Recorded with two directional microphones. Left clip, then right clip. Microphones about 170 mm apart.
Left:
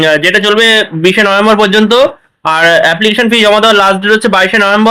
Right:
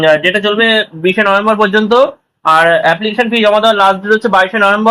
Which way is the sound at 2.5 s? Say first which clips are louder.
Left 1 dB; 45° left (ahead or behind).